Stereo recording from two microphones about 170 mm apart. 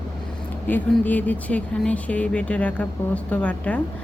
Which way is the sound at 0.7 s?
10° left (ahead or behind).